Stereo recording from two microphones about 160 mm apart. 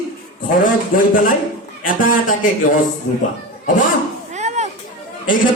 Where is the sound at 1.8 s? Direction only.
60° left (ahead or behind).